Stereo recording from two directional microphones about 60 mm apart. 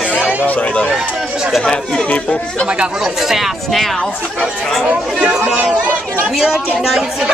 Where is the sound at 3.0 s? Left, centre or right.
Centre.